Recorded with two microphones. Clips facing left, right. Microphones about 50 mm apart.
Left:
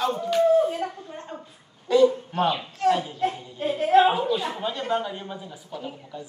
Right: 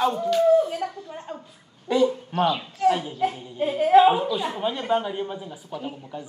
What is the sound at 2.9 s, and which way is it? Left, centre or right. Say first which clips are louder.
Speech: right 1 dB; centre.